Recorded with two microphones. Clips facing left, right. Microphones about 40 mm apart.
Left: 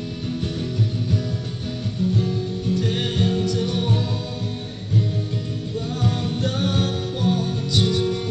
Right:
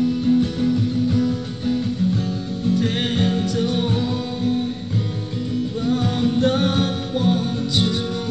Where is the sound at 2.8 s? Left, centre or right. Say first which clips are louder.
Right 2 dB; right.